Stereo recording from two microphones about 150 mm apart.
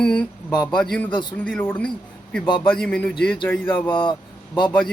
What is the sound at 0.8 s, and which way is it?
A man's voice, 5° left (ahead or behind).